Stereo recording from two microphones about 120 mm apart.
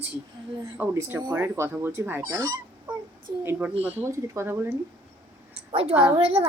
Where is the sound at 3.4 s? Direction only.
20° right (ahead or behind).